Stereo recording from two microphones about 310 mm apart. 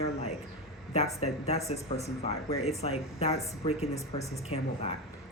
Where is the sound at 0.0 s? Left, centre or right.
Left.